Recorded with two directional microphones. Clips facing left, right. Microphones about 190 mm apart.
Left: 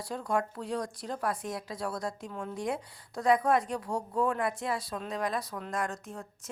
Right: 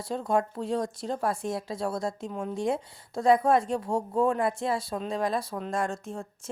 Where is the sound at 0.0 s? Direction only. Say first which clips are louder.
Right 4 dB; 25° right (ahead or behind).